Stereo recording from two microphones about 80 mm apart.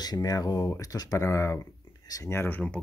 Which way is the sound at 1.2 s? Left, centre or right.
Left.